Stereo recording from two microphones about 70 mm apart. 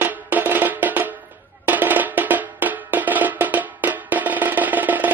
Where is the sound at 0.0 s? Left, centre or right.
Right.